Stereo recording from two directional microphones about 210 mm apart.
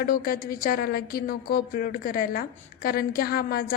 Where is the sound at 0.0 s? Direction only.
45° left (ahead or behind).